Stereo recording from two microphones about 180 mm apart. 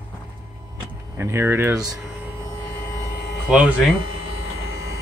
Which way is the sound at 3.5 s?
5° right (ahead or behind).